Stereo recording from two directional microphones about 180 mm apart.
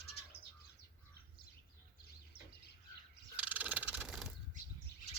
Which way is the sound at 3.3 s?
10° right (ahead or behind).